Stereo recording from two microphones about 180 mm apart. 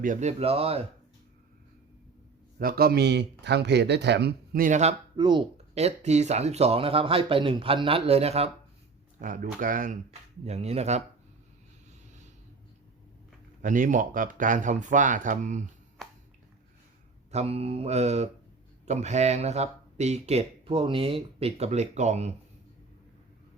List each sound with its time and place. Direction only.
0.0 s speech: 45° right (ahead or behind)
2.6 s speech: 55° right (ahead or behind); by 4.9 s 40° right (ahead or behind)
5.1 s speech: 25° right (ahead or behind)
9.1 s speech: 50° right (ahead or behind)
13.6 s speech: 45° right (ahead or behind)
17.3 s speech: 35° right (ahead or behind)